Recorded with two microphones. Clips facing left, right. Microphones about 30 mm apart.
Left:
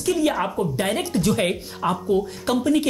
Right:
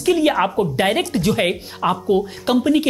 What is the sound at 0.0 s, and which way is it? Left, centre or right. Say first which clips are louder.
Speech: right 5 dB; right.